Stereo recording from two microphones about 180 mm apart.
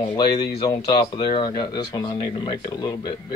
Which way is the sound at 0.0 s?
25° left (ahead or behind).